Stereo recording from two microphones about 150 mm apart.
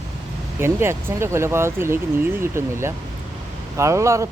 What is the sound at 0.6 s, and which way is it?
Speech, 15° right (ahead or behind).